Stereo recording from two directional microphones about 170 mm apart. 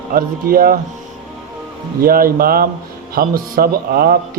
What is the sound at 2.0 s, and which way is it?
A man's voice, 60° right (ahead or behind).